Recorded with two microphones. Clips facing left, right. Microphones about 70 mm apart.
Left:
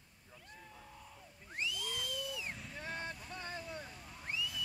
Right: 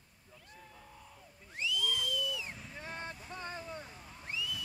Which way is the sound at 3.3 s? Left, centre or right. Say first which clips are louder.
Right 2 dB; right.